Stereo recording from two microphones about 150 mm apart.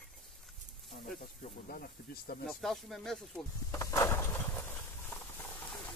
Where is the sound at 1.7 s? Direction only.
75° left (ahead or behind).